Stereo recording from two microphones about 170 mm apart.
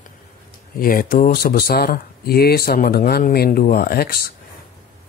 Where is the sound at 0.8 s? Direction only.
60° left (ahead or behind).